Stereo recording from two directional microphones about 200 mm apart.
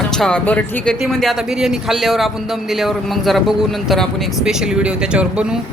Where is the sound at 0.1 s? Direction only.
5° left (ahead or behind).